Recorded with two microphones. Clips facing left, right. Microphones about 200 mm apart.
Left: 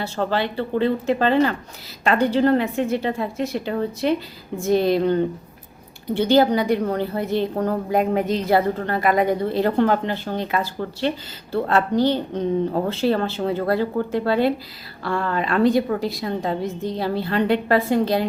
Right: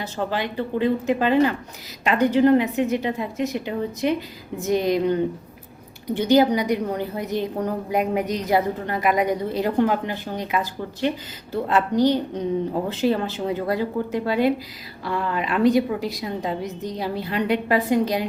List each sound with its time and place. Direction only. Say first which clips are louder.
0.0 s a woman's voice: left 3 dB; 10° right (ahead or behind)
6.2 s a woman's voice: left 1 dB; 15° right (ahead or behind)
16.6 s a woman's voice: left 4 dB; 30° left (ahead or behind)
17.0 s a woman's voice: left 3 dB; 15° right (ahead or behind)